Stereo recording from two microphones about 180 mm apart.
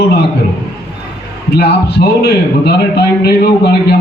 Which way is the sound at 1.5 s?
65° left (ahead or behind).